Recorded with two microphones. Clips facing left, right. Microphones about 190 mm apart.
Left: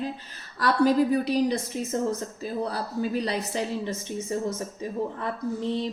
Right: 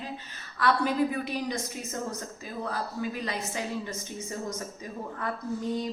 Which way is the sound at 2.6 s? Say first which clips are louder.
Left 2 dB; 35° left (ahead or behind).